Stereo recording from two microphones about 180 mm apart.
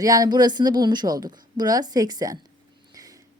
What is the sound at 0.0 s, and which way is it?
A woman's voice, 20° right (ahead or behind).